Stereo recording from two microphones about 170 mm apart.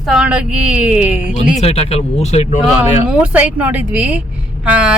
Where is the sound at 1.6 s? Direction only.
35° left (ahead or behind).